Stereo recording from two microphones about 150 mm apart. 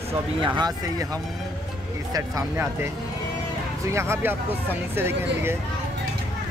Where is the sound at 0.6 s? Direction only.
25° right (ahead or behind).